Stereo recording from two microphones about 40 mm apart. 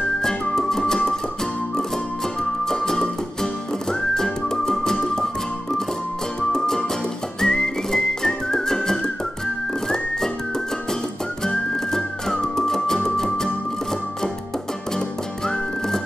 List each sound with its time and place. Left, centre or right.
0.2 s music: centre
2.6 s music: centre
3.9 s whistling: centre
6.5 s music: centre
7.3 s whistling: centre
11.4 s music: centre
15.0 s music: centre